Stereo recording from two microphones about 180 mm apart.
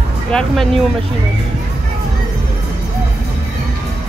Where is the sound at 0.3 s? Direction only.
5° left (ahead or behind).